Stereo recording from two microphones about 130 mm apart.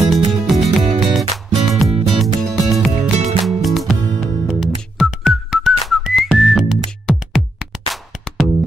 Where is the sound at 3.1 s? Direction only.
55° right (ahead or behind).